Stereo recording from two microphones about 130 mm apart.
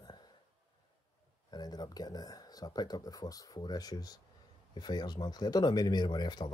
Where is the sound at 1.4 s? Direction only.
30° left (ahead or behind).